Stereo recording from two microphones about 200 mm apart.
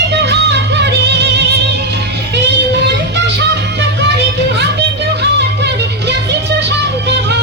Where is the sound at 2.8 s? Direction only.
60° right (ahead or behind).